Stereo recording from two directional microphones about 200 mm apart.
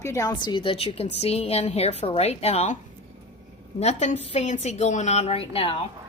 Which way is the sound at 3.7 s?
35° left (ahead or behind).